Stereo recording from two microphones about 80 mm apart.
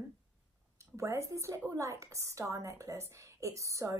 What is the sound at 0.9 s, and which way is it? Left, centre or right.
A woman's voice, right.